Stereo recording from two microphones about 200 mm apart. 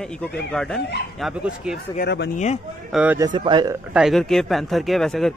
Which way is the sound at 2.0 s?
55° left (ahead or behind).